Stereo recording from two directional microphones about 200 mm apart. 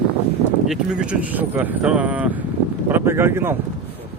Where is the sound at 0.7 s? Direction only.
5° right (ahead or behind).